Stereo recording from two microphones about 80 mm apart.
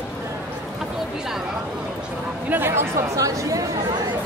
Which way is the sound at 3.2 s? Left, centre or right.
Right.